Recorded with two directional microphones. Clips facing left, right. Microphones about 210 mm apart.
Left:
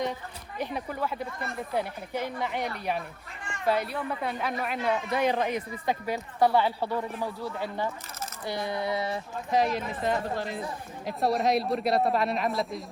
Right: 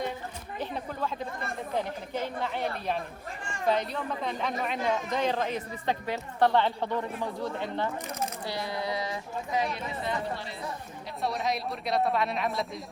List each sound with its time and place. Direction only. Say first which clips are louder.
0.6 s a woman's voice: left 2 dB; 10° left (ahead or behind)
3.7 s a woman's voice: left 1 dB; 10° left (ahead or behind)
8.4 s speech: left 6 dB; 20° left (ahead or behind)
10.0 s speech: left 4 dB; 45° left (ahead or behind)
11.2 s a woman's voice: left 6 dB; centre (ahead or behind)